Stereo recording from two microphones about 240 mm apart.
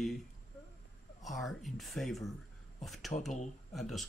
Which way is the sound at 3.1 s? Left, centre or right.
Left.